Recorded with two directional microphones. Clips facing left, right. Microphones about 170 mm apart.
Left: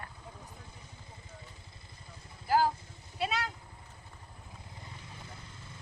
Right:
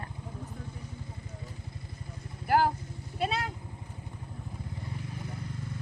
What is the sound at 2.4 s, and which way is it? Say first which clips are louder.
Speech: right 2 dB; 60° right (ahead or behind).